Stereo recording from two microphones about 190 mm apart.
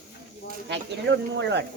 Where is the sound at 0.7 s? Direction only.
70° right (ahead or behind).